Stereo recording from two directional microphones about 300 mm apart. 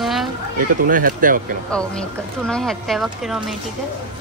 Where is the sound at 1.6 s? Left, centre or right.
Centre.